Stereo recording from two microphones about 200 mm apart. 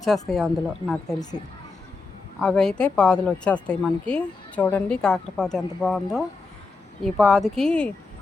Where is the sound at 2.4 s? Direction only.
5° left (ahead or behind).